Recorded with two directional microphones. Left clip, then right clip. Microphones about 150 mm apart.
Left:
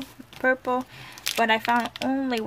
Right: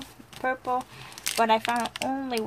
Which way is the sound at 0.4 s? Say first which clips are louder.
Left 5 dB; 30° left (ahead or behind).